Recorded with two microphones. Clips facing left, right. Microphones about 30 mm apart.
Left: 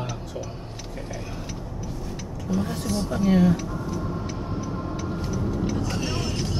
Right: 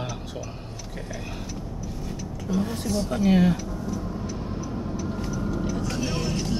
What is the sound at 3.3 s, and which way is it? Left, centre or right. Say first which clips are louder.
Speech: left 1 dB; right.